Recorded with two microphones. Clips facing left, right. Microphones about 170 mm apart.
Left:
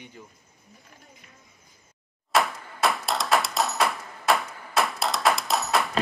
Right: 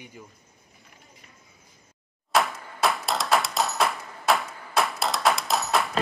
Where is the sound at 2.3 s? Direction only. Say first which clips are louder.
Even; centre (ahead or behind).